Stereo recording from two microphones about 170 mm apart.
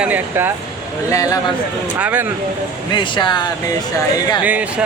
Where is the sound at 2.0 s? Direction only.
10° right (ahead or behind).